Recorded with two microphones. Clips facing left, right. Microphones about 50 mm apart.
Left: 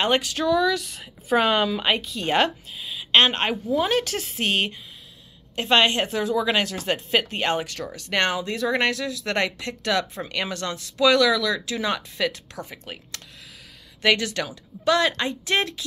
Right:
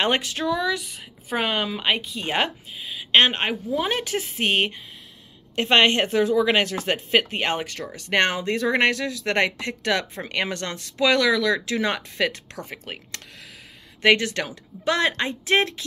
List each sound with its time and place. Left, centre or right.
0.0 s a woman's voice: right